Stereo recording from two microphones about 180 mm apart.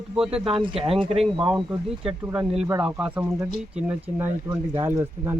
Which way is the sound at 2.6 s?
5° right (ahead or behind).